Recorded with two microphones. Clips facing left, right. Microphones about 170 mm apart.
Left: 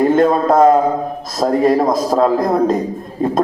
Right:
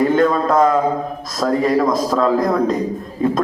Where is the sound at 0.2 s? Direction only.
40° left (ahead or behind).